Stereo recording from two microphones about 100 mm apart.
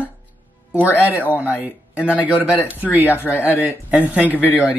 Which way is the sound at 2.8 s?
20° right (ahead or behind).